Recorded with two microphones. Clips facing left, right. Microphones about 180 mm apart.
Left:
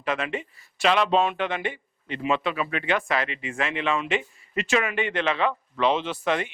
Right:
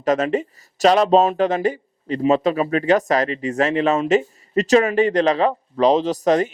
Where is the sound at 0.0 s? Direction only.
40° right (ahead or behind).